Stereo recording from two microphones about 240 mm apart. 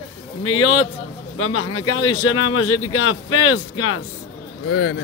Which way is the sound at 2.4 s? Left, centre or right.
Left.